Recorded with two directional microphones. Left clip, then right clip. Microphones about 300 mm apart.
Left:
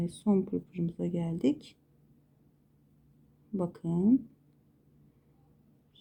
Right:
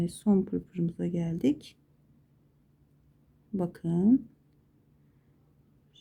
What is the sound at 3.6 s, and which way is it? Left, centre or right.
Speech, centre.